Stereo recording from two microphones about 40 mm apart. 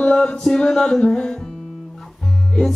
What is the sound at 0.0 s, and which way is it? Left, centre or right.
Chant, left.